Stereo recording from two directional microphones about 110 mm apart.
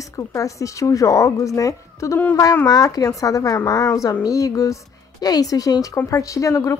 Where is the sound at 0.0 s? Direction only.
30° left (ahead or behind).